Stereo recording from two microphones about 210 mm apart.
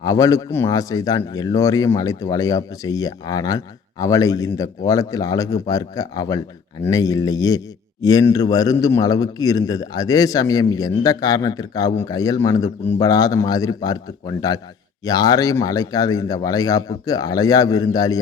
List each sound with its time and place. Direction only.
0.0 s a man's voice: 15° left (ahead or behind)